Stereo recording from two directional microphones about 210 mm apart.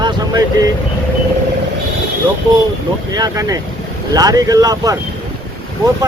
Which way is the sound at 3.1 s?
15° right (ahead or behind).